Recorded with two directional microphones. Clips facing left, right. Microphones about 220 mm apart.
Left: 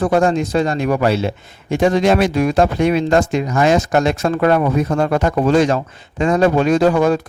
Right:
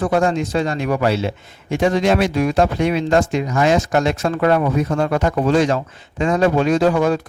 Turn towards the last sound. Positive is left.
turn(degrees=45)  # may be behind; listen again after turning